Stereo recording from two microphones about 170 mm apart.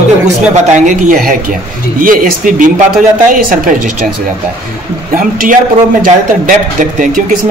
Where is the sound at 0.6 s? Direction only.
45° right (ahead or behind).